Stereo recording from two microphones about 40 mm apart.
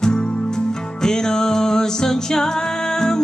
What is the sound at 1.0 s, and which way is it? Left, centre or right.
Music, centre.